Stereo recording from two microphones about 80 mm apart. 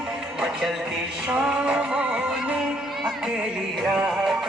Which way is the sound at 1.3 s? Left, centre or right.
Centre.